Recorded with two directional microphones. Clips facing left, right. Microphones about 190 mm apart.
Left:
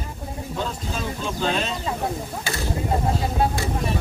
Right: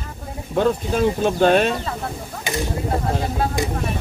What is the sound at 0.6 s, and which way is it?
Speech, 55° right (ahead or behind).